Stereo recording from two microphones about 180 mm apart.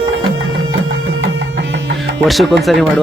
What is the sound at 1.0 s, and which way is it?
Music, 90° right.